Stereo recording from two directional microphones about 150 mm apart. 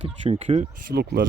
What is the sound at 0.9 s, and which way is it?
Speech, 90° right.